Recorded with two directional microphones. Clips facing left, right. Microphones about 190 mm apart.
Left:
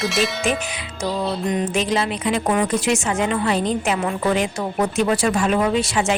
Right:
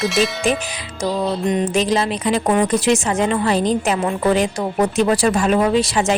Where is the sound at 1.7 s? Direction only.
40° right (ahead or behind).